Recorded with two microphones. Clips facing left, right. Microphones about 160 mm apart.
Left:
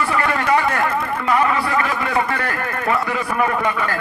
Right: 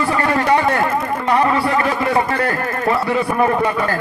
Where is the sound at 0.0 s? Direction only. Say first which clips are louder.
Right 3 dB; 30° right (ahead or behind).